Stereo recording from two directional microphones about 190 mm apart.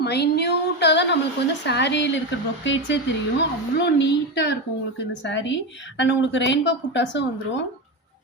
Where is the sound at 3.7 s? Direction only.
65° left (ahead or behind).